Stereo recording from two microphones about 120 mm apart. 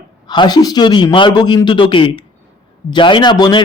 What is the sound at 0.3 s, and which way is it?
Speech, 35° left (ahead or behind).